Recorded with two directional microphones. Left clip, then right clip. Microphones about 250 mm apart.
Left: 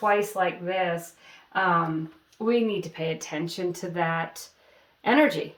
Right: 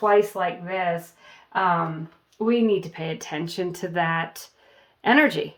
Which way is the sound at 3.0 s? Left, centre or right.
Right.